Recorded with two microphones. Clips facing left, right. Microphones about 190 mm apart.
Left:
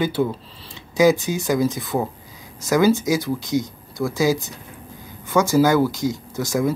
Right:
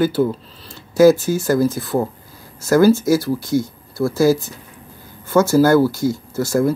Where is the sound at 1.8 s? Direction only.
Centre (ahead or behind).